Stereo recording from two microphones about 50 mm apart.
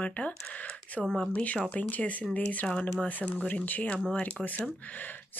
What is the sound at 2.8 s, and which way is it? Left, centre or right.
Speech, left.